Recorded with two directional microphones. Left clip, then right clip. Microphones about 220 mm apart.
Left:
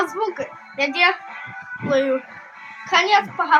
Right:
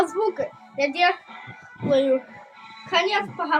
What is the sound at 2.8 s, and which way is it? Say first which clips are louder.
Speech: left 5 dB; 30° left (ahead or behind).